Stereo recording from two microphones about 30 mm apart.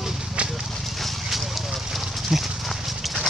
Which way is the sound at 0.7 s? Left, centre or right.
Centre.